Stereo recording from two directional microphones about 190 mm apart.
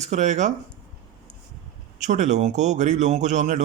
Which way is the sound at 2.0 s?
40° right (ahead or behind).